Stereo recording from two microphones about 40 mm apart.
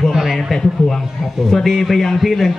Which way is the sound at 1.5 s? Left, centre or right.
Centre.